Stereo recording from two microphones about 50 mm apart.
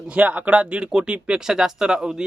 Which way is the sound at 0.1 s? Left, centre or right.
Right.